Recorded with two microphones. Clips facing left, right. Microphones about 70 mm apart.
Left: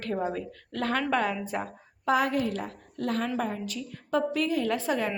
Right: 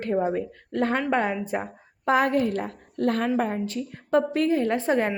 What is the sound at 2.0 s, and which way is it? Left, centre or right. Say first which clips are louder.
A woman's voice: right 4 dB; right.